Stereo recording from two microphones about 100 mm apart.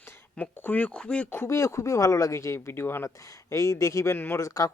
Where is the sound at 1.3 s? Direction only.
25° left (ahead or behind).